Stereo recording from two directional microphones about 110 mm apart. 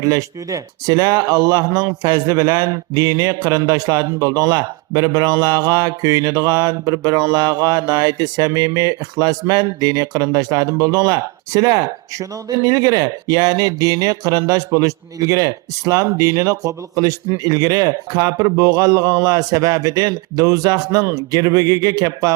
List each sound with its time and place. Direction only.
0.0 s speech: 30° right (ahead or behind)